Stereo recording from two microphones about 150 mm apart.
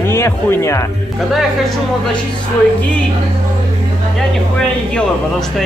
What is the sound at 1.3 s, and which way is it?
Speech, centre (ahead or behind).